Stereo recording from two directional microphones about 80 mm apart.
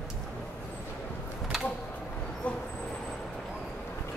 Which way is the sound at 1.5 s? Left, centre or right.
Centre.